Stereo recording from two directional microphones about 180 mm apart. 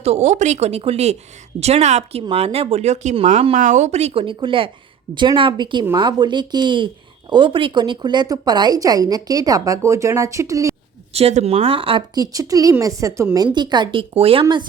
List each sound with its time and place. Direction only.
0.0 s a woman's voice: 35° right (ahead or behind); by 10.8 s 15° right (ahead or behind)
11.1 s a woman's voice: 35° right (ahead or behind)